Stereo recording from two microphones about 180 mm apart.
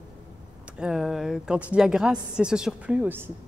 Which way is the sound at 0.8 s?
Centre (ahead or behind).